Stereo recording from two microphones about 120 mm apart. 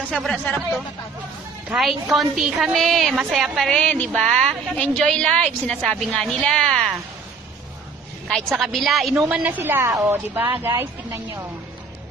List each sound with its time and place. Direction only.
0.1 s speech: 5° left (ahead or behind)
1.7 s a woman's voice: 5° right (ahead or behind)
8.5 s a woman's voice: centre (ahead or behind)
9.3 s a woman's voice: 15° right (ahead or behind)